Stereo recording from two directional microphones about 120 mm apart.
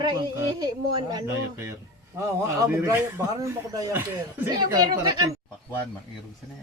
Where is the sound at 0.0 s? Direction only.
35° right (ahead or behind).